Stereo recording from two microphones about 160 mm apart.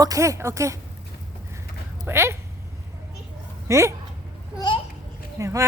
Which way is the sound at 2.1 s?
15° right (ahead or behind).